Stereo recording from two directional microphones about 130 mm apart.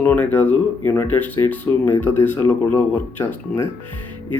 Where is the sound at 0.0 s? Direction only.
15° left (ahead or behind).